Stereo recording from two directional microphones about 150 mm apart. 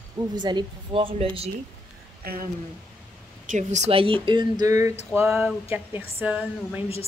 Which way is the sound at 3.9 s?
40° right (ahead or behind).